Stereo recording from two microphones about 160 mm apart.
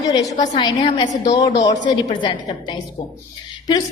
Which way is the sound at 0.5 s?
30° left (ahead or behind).